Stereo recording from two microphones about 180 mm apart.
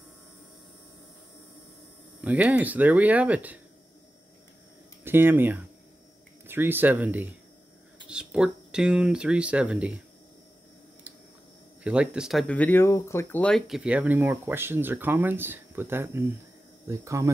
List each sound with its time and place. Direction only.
2.2 s speech: 10° right (ahead or behind)
5.0 s speech: 10° right (ahead or behind)
11.8 s speech: 5° right (ahead or behind)